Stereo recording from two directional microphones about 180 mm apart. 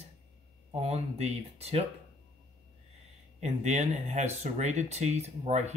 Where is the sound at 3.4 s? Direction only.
40° right (ahead or behind).